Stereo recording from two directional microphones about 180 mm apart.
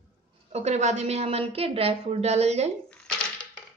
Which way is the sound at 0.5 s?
40° right (ahead or behind).